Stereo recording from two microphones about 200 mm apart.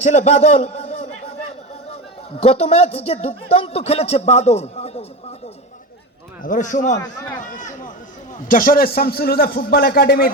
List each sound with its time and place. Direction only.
0.0 s a sound: 35° left (ahead or behind)
2.4 s speech: 30° left (ahead or behind)
6.4 s a man's voice: 40° left (ahead or behind)